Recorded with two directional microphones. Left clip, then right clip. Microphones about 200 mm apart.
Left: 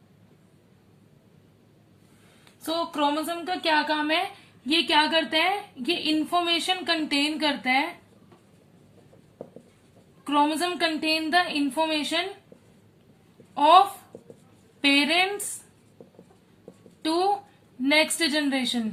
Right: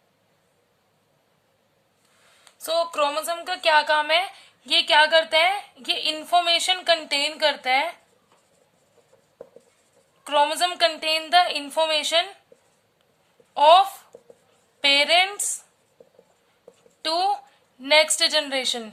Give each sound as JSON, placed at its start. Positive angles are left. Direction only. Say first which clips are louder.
{"t": 2.6, "sound": "a woman's voice", "louder": "right 3 dB", "side_deg": -50}
{"t": 10.2, "sound": "a woman's voice", "louder": "right 3 dB", "side_deg": -50}
{"t": 13.5, "sound": "a woman's voice", "louder": "right 2 dB", "side_deg": -50}
{"t": 14.1, "sound": "a sound", "louder": "left 1 dB", "side_deg": 0}
{"t": 14.8, "sound": "a woman's voice", "louder": "right 3 dB", "side_deg": -45}
{"t": 17.0, "sound": "a woman's voice", "louder": "right 1 dB", "side_deg": -45}